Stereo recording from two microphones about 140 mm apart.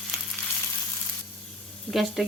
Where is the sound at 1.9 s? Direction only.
Centre (ahead or behind).